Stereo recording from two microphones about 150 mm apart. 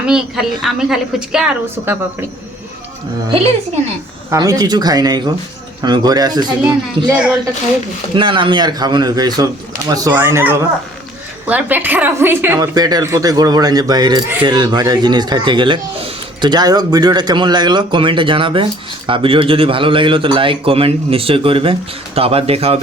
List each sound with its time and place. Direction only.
0.0 s a woman's voice: 5° right (ahead or behind)
1.7 s speech: 15° right (ahead or behind)
3.2 s speech: 40° right (ahead or behind)
4.3 s a woman's voice: 25° right (ahead or behind)
8.1 s a woman's voice: 35° right (ahead or behind)